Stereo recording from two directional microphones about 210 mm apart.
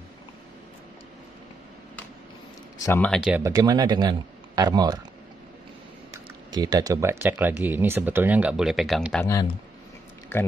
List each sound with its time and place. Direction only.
2.8 s speech: 10° left (ahead or behind)
3.2 s speech: 5° right (ahead or behind)
6.5 s speech: 20° right (ahead or behind); by 9.2 s centre (ahead or behind)
9.2 s speech: 15° left (ahead or behind)